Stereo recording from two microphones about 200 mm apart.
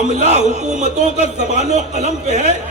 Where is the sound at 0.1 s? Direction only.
35° right (ahead or behind).